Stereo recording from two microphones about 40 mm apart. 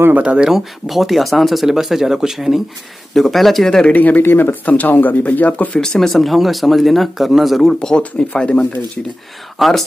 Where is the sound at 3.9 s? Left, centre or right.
Left.